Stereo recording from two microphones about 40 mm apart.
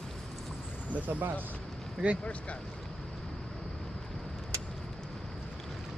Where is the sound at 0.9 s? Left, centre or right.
Right.